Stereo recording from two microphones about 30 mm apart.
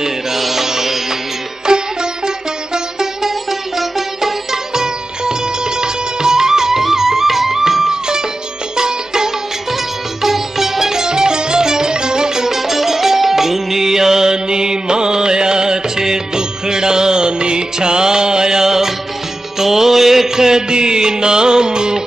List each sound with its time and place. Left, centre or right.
0.0 s music: centre
1.7 s sitar: right
8.7 s music: right
10.2 s music: centre; by 22.0 s right